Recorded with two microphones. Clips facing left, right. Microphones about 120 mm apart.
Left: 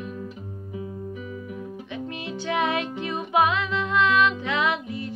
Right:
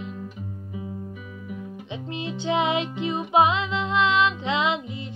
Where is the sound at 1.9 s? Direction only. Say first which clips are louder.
Right 2 dB; 25° right (ahead or behind).